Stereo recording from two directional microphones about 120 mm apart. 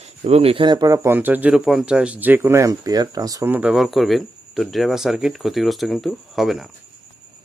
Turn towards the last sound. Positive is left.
turn(degrees=0)  # may be behind; listen again after turning